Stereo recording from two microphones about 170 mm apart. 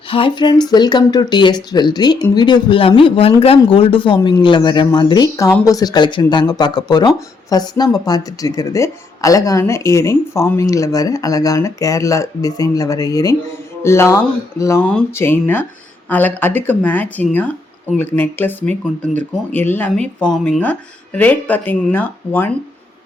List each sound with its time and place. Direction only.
0.1 s speech: 30° left (ahead or behind); by 22.4 s 10° left (ahead or behind)